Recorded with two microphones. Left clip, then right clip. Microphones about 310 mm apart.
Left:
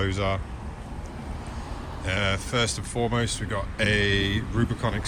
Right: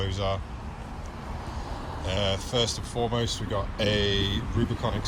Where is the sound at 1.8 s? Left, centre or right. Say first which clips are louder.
Right 2 dB; right.